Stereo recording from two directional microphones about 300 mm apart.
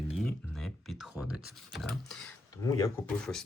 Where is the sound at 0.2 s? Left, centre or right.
Centre.